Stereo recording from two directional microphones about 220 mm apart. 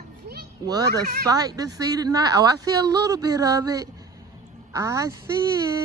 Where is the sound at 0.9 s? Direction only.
45° right (ahead or behind).